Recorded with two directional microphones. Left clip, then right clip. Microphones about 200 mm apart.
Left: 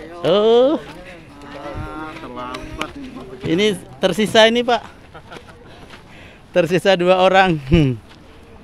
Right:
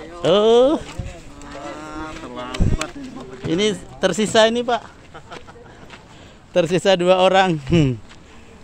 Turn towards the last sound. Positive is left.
turn(degrees=0)  # may be behind; listen again after turning